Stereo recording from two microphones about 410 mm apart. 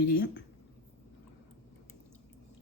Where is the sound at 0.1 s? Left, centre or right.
Left.